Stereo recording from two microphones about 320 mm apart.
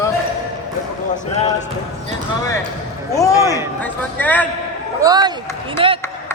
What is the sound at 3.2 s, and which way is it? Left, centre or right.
Speech, centre.